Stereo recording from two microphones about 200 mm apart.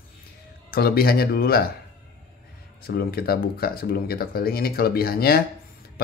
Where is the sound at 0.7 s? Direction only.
50° left (ahead or behind).